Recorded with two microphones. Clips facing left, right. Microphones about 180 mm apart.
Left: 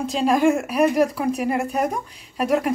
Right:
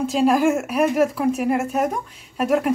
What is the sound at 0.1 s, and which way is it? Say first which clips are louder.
A woman's voice: even; 5° right (ahead or behind).